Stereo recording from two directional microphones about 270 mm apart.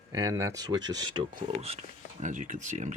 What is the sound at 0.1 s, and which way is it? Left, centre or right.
Speech, centre.